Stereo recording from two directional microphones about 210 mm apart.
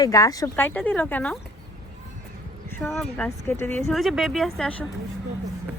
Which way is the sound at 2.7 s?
Centre (ahead or behind).